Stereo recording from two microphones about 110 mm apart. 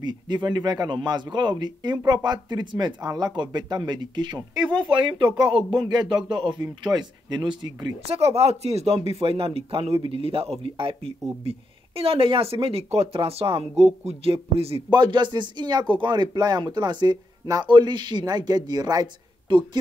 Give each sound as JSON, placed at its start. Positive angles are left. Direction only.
{"t": 0.0, "sound": "speech", "side_deg": -40}
{"t": 5.5, "sound": "speech", "side_deg": -50}
{"t": 8.1, "sound": "speech", "side_deg": -65}
{"t": 14.9, "sound": "speech", "side_deg": -45}
{"t": 19.5, "sound": "speech", "side_deg": -50}